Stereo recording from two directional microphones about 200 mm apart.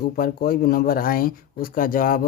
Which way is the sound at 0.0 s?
45° left (ahead or behind).